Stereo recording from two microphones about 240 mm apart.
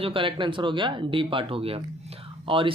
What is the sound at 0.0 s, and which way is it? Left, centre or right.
Speech, right.